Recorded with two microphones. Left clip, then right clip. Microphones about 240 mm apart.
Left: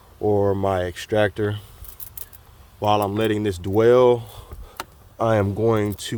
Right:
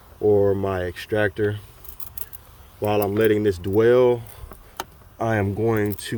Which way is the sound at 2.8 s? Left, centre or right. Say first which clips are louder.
Even; centre.